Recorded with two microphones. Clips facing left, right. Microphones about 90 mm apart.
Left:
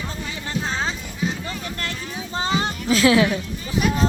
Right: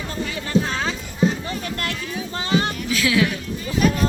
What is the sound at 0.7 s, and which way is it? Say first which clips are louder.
Clip-clop: right 1 dB; 25° left (ahead or behind).